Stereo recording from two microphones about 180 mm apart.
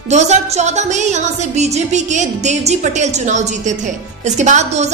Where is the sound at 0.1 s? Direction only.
40° right (ahead or behind).